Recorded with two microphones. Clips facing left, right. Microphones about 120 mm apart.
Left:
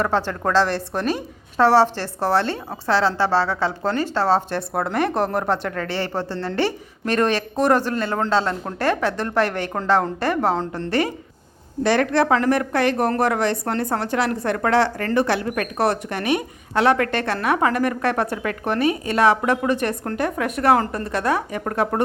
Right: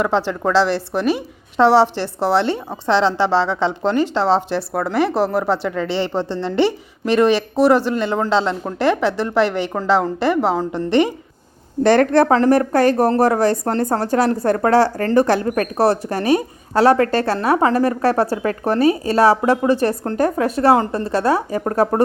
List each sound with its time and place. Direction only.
0.0 s a woman's voice: 10° right (ahead or behind)
4.7 s a woman's voice: centre (ahead or behind)
10.7 s a woman's voice: 20° right (ahead or behind)
11.8 s a woman's voice: 50° right (ahead or behind)